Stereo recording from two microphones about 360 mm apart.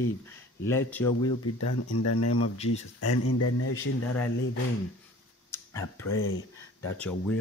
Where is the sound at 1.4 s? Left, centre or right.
Left.